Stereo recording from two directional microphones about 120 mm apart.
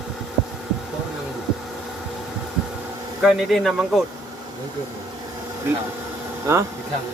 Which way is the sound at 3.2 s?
Centre (ahead or behind).